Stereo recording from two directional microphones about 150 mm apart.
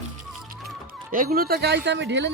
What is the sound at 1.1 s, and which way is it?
Speech, 70° right (ahead or behind).